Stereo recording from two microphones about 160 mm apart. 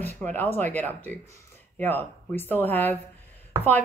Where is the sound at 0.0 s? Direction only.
10° left (ahead or behind).